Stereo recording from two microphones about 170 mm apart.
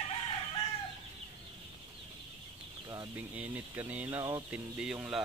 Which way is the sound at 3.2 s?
10° right (ahead or behind).